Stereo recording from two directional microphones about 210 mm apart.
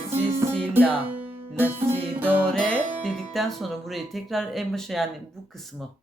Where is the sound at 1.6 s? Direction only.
10° right (ahead or behind).